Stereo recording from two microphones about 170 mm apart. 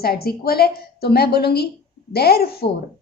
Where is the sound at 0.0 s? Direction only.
65° left (ahead or behind).